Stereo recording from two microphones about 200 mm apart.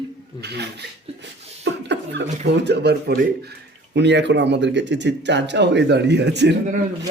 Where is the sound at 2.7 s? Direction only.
55° right (ahead or behind).